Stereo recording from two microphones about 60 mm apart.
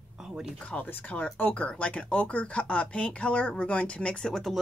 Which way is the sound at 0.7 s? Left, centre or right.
Left.